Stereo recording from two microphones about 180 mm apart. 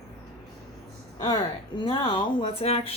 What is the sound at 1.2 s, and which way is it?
Speech, 25° left (ahead or behind).